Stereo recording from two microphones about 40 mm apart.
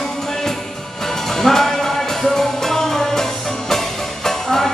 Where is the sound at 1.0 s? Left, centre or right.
Centre.